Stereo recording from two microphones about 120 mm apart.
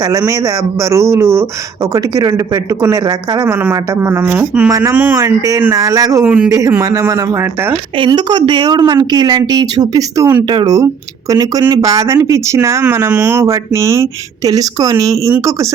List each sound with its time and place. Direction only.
0.0 s speech: 30° right (ahead or behind)
3.5 s speech: 20° right (ahead or behind)
6.2 s speech: 10° right (ahead or behind)
6.5 s speech: 25° right (ahead or behind)
7.7 s a woman's voice: 40° right (ahead or behind)
10.5 s a woman's voice: 40° right (ahead or behind)
11.3 s speech: 30° right (ahead or behind)